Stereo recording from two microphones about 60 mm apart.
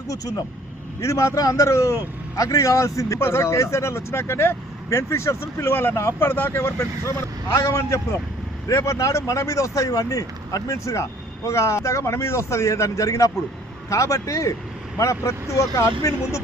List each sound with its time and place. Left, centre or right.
1.0 s speech: left
3.2 s speech: left